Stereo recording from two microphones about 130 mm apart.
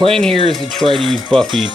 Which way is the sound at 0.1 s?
5° left (ahead or behind).